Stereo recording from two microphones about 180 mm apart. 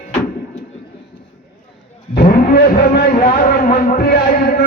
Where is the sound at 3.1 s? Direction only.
40° left (ahead or behind).